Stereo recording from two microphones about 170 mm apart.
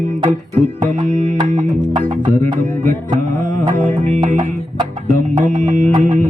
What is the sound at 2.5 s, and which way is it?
Music, 50° right (ahead or behind).